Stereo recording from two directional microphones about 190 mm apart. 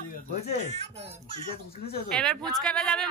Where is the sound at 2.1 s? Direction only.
5° left (ahead or behind).